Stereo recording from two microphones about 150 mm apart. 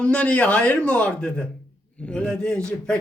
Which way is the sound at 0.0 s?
5° left (ahead or behind).